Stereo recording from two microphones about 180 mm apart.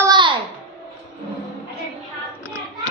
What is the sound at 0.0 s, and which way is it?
Babbling, 25° right (ahead or behind).